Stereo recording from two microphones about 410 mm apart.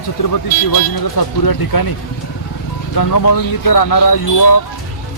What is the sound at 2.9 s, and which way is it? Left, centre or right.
Speech, left.